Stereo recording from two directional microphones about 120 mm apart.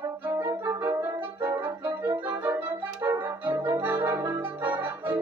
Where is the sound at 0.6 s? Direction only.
25° right (ahead or behind).